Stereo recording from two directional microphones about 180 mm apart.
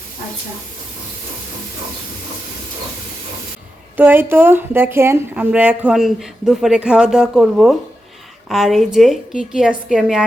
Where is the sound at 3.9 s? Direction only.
10° right (ahead or behind).